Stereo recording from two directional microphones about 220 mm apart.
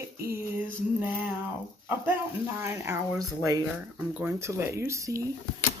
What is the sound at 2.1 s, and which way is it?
Speech, 10° right (ahead or behind).